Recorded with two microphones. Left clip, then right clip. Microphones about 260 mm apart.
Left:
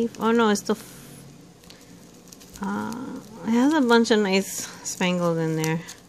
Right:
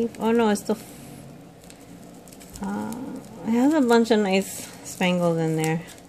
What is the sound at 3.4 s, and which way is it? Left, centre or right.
A woman's voice, centre.